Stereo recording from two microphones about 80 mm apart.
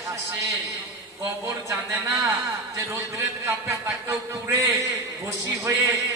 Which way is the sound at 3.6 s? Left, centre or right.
Right.